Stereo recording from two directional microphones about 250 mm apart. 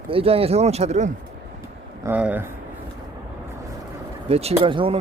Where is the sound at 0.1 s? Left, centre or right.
Right.